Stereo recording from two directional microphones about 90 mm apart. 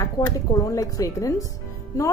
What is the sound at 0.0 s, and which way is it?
A woman's voice, 40° left (ahead or behind).